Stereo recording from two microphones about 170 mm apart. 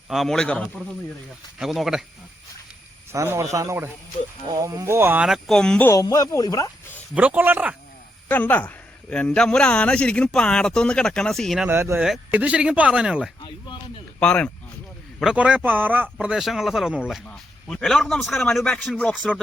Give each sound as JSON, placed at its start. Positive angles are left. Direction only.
{"t": 0.1, "sound": "a man's voice", "side_deg": 0}
{"t": 3.1, "sound": "speech", "side_deg": -15}
{"t": 5.9, "sound": "speech", "side_deg": 20}
{"t": 7.1, "sound": "speech", "side_deg": -10}
{"t": 8.3, "sound": "a man's voice", "side_deg": 10}
{"t": 11.7, "sound": "speech", "side_deg": -15}
{"t": 12.0, "sound": "a man's voice", "side_deg": -5}
{"t": 14.2, "sound": "a man's voice", "side_deg": 5}
{"t": 15.2, "sound": "a man's voice", "side_deg": -5}